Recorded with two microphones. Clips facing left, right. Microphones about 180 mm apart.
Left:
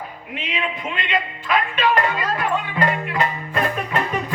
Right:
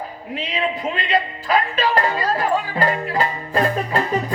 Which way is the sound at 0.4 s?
35° right (ahead or behind).